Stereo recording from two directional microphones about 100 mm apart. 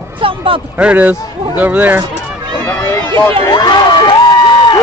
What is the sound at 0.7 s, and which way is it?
Speech, 15° right (ahead or behind).